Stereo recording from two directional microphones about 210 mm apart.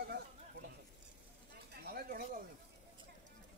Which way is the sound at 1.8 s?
45° right (ahead or behind).